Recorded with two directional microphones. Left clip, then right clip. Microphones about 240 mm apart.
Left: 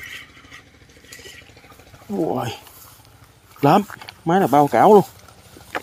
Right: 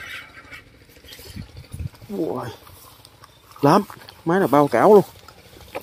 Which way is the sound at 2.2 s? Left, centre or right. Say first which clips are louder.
Left 7 dB; centre.